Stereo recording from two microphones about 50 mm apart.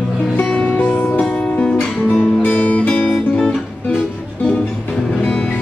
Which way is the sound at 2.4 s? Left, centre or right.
Left.